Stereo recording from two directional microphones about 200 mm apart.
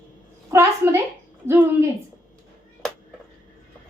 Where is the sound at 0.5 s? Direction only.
15° right (ahead or behind).